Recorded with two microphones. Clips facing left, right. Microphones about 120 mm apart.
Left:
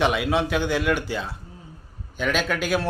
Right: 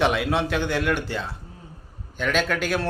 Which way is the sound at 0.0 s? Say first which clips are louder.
Even; centre (ahead or behind).